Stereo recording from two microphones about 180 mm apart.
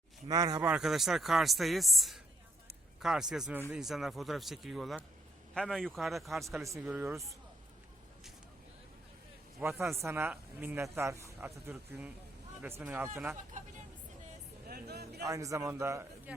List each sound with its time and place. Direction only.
0.3 s speech: 20° right (ahead or behind)
0.6 s speech: 5° right (ahead or behind)
9.6 s speech: 15° right (ahead or behind)
14.7 s a sound: 65° right (ahead or behind)
15.2 s speech: 20° right (ahead or behind)